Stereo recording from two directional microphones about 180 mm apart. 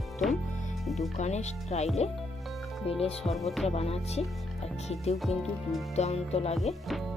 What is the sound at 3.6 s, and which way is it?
Speech, 35° left (ahead or behind).